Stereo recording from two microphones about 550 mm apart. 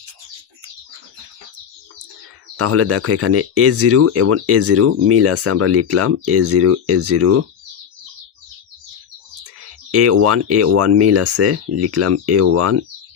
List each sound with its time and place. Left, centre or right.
2.6 s speech: right
9.9 s speech: right